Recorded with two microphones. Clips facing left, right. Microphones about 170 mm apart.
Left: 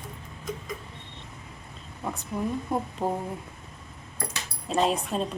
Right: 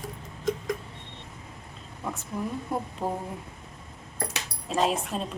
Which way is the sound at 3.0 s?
25° left (ahead or behind).